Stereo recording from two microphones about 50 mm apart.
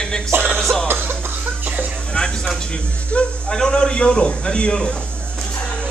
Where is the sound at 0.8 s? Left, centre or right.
Right.